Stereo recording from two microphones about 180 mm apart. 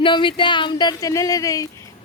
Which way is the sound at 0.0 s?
25° left (ahead or behind).